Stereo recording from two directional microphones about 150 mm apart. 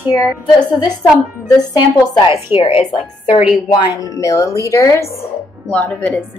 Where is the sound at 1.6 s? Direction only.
25° left (ahead or behind).